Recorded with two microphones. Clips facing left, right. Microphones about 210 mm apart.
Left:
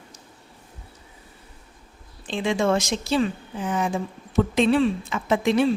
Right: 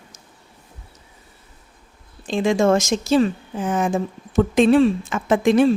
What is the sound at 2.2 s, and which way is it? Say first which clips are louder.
A woman's voice: right 5 dB; 45° right (ahead or behind).